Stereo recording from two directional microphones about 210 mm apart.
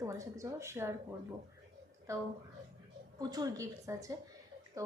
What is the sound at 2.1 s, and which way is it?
Speech, 15° right (ahead or behind).